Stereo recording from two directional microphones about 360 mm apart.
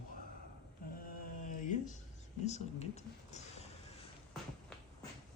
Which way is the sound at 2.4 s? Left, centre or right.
Centre.